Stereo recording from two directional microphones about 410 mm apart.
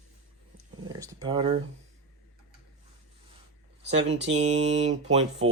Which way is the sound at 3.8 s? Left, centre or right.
Right.